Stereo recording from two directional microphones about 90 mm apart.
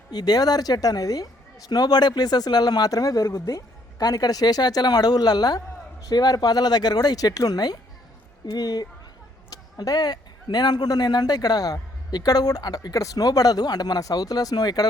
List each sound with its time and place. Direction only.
0.1 s a woman's voice: 50° left (ahead or behind)